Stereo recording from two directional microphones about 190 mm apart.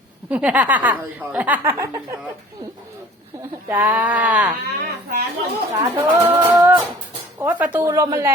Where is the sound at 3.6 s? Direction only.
10° right (ahead or behind).